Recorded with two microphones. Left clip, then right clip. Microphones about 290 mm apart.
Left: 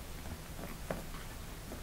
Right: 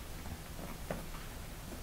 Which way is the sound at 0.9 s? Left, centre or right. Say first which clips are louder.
Left 1 dB; centre.